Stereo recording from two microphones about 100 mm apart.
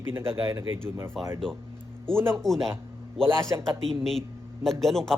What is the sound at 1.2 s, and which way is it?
Speech, centre (ahead or behind).